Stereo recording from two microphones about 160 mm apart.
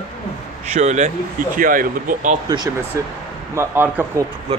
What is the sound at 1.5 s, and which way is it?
Speech, 60° right (ahead or behind).